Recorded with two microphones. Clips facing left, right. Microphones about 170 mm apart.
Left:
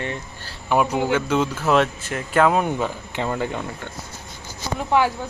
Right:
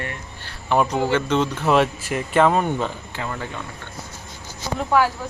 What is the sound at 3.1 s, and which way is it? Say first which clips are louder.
Speech: left 7 dB; 20° left (ahead or behind).